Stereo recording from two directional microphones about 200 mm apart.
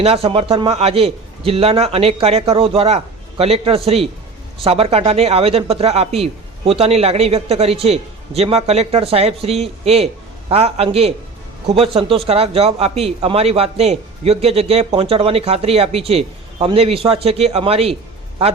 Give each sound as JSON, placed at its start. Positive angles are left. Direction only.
{"t": 0.0, "sound": "a man's voice", "side_deg": -30}